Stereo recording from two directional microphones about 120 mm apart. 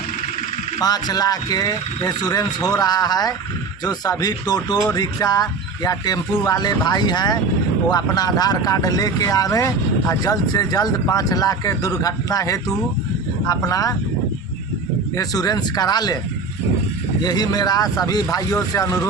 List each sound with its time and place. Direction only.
0.8 s speech: 35° left (ahead or behind)
15.1 s speech: 30° left (ahead or behind)
17.2 s speech: 35° left (ahead or behind)